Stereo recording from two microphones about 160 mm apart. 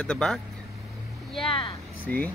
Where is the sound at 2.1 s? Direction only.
10° left (ahead or behind).